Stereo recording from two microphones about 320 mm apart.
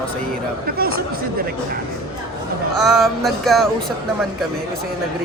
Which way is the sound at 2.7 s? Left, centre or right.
Centre.